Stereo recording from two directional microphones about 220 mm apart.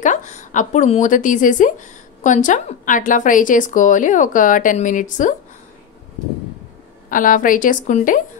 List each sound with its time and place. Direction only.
0.0 s a woman's voice: 35° left (ahead or behind)
7.1 s a woman's voice: 35° left (ahead or behind)